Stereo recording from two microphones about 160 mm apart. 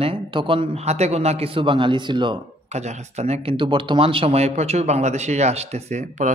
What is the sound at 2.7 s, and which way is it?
Speech, 45° right (ahead or behind).